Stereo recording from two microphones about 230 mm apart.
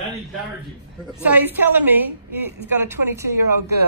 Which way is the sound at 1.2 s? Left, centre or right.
Centre.